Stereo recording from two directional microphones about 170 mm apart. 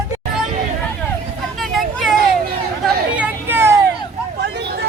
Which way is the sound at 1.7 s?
Centre (ahead or behind).